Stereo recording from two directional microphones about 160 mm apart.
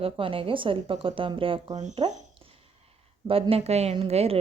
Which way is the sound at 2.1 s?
35° right (ahead or behind).